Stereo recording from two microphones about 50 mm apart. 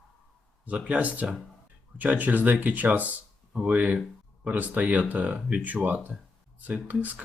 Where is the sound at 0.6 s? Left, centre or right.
Right.